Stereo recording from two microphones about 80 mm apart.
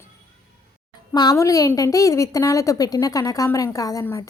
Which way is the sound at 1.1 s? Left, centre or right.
Left.